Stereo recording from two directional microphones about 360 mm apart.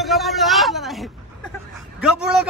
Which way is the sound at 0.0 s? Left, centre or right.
Centre.